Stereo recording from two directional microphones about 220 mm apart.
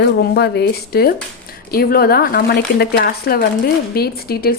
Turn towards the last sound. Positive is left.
turn(degrees=45)  # may be behind; listen again after turning